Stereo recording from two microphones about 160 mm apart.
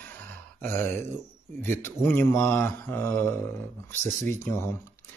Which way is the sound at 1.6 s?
15° left (ahead or behind).